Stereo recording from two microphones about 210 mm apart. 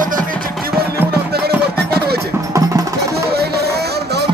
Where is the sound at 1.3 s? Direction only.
50° right (ahead or behind).